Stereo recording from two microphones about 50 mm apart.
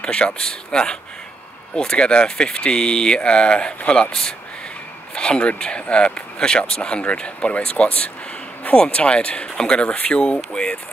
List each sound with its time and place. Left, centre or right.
0.0 s speech: centre